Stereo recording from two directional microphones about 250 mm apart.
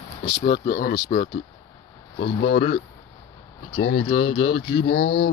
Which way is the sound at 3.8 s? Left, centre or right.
Left.